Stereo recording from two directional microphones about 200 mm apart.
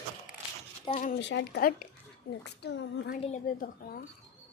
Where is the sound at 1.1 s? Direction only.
60° left (ahead or behind).